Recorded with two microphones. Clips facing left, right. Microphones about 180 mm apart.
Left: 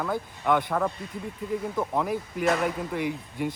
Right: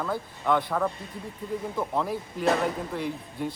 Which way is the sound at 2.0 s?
10° left (ahead or behind).